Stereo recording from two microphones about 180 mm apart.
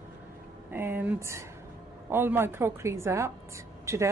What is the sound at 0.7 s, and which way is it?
A woman's voice, 10° right (ahead or behind).